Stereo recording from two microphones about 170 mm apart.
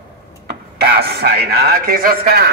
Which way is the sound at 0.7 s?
65° right (ahead or behind).